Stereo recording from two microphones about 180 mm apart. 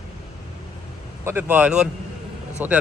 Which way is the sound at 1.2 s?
10° right (ahead or behind).